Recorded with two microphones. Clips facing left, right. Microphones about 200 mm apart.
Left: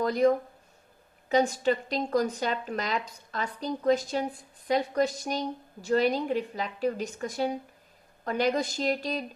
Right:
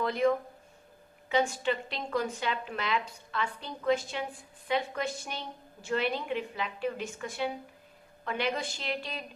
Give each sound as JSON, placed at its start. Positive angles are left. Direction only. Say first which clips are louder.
{"t": 0.0, "sound": "a woman's voice", "louder": "left 4 dB", "side_deg": 40}